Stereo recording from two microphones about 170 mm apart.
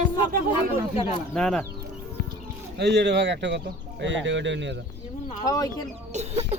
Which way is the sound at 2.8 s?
85° right.